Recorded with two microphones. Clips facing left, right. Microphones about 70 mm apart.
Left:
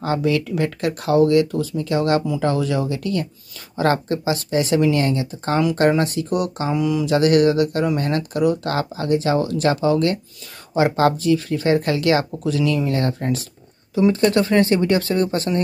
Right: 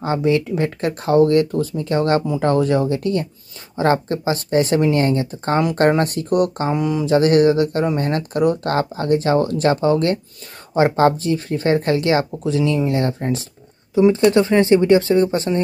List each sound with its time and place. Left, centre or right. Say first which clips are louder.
0.0 s speech: right 2 dB; right